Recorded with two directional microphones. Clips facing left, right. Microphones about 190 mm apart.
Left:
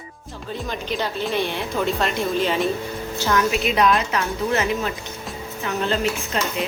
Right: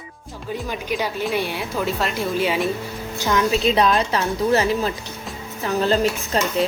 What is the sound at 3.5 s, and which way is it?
Speech, 30° right (ahead or behind).